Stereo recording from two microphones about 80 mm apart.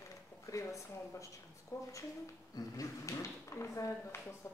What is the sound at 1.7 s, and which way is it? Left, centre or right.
Speech, left.